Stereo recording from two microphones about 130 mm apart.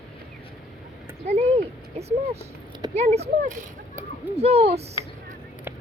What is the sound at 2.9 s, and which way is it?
Speech, 55° right (ahead or behind).